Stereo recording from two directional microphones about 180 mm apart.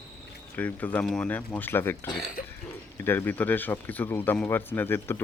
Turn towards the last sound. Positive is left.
turn(degrees=10)  # may be behind; listen again after turning